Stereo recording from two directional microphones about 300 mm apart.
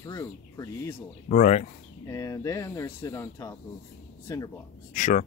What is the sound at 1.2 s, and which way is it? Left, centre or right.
Speech, left.